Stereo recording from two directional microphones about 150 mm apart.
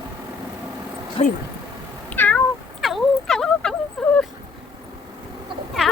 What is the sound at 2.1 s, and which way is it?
Cat, 10° left (ahead or behind).